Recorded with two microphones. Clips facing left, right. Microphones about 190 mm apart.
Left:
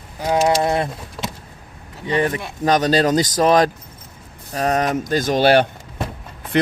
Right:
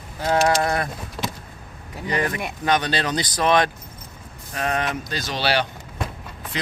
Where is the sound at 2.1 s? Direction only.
25° left (ahead or behind).